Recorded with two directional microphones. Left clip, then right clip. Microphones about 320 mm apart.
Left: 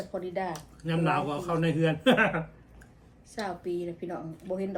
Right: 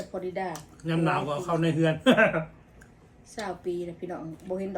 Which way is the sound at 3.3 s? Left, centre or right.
Centre.